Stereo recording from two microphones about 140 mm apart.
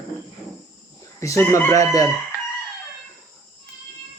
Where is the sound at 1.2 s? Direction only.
20° left (ahead or behind).